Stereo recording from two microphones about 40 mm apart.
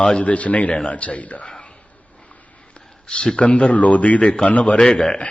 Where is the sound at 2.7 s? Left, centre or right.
Left.